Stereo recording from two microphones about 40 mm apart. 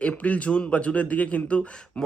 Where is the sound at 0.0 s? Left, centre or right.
Left.